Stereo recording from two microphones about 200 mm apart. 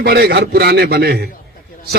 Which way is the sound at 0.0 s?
50° right (ahead or behind).